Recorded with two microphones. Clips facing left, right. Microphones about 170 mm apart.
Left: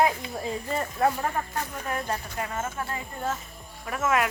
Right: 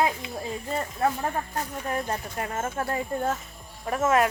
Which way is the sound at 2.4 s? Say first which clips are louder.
Right 2 dB; 40° right (ahead or behind).